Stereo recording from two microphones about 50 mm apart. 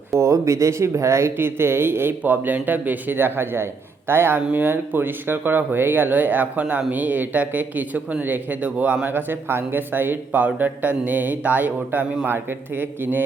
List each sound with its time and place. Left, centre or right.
0.1 s speech: right
1.4 s a man's voice: right
2.2 s a man's voice: right